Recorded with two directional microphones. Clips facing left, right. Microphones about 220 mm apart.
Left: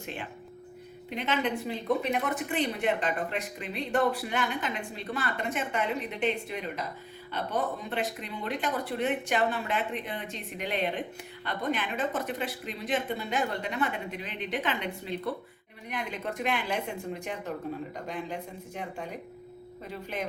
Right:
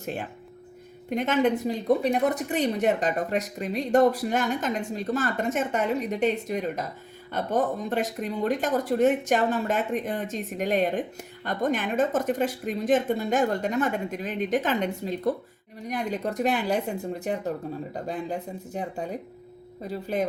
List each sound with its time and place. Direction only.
0.0 s speech: 45° right (ahead or behind)